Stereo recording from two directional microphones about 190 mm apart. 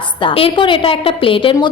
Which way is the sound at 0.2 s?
25° left (ahead or behind).